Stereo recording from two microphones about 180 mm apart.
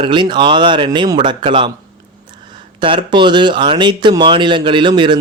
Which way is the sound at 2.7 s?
25° right (ahead or behind).